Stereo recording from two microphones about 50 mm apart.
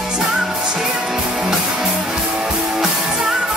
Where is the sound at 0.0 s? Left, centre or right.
Centre.